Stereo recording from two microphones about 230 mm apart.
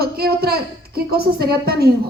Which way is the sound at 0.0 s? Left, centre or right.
Right.